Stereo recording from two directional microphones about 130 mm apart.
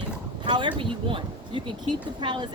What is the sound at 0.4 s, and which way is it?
Speech, 35° right (ahead or behind).